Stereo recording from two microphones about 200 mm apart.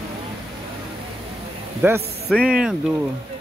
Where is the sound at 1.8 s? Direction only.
10° right (ahead or behind).